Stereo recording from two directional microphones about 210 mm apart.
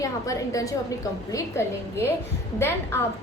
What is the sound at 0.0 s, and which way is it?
A woman's voice, 15° left (ahead or behind).